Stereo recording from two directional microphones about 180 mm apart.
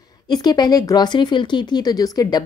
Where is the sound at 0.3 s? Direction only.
25° left (ahead or behind).